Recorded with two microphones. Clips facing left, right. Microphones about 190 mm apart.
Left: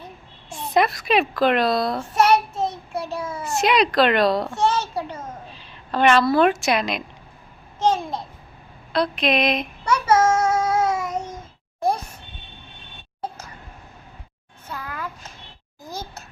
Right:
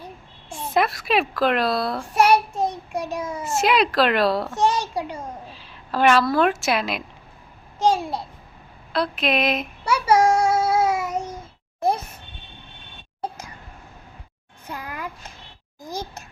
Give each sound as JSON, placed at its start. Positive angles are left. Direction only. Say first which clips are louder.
{"t": 0.5, "sound": "a child's voice", "louder": "left 2 dB", "side_deg": 0}
{"t": 3.4, "sound": "a child's voice", "louder": "left 1 dB", "side_deg": 0}
{"t": 4.5, "sound": "a child's voice", "louder": "even", "side_deg": -15}
{"t": 8.9, "sound": "child singing", "louder": "left 2 dB", "side_deg": -5}
{"t": 14.7, "sound": "a sound", "louder": "even", "side_deg": -15}